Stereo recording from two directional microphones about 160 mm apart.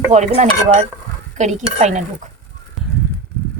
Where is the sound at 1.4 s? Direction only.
45° right (ahead or behind).